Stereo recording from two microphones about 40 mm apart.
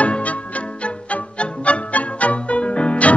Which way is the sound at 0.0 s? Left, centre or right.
Left.